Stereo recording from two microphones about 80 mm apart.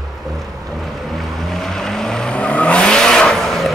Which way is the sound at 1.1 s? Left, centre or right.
Centre.